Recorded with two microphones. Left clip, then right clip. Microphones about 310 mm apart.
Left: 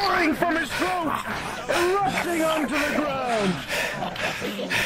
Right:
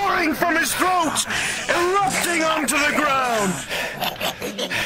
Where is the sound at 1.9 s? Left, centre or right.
Right.